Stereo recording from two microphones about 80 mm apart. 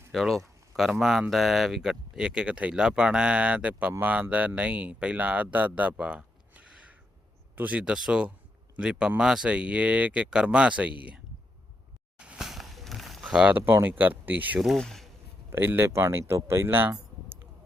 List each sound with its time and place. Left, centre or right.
0.1 s speech: centre
12.1 s a sound: centre
13.2 s speech: centre
13.8 s speech: right
14.8 s speech: centre
15.4 s speech: right